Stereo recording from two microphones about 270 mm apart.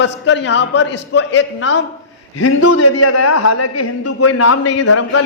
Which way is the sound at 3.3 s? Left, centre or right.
Left.